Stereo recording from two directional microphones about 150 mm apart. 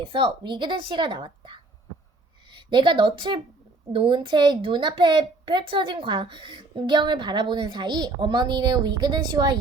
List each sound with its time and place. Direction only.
0.0 s a woman's voice: 35° right (ahead or behind)